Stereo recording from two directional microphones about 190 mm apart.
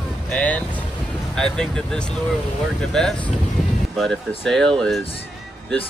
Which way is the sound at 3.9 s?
5° left (ahead or behind).